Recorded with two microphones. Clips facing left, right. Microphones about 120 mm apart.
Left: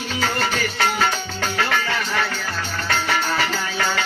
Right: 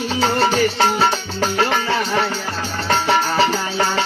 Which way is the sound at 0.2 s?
35° right (ahead or behind).